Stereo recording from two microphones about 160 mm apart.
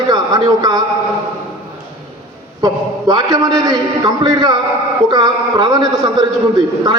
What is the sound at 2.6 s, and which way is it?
A man's voice, 25° right (ahead or behind).